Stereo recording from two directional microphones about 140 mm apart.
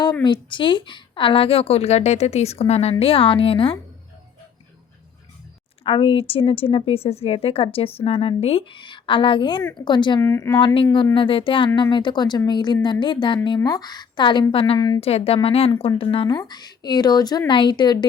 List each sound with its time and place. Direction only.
0.0 s a woman's voice: 35° left (ahead or behind)
5.8 s a woman's voice: 40° left (ahead or behind)
10.2 s a woman's voice: 20° left (ahead or behind)
10.9 s a woman's voice: 35° left (ahead or behind)
14.8 s a woman's voice: 30° left (ahead or behind)
15.0 s a woman's voice: 45° left (ahead or behind)